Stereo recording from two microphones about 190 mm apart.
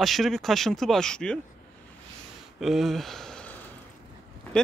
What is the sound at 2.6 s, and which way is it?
Speech, centre (ahead or behind).